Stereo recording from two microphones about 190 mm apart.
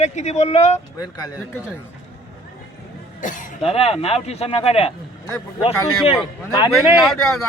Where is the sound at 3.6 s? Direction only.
30° left (ahead or behind).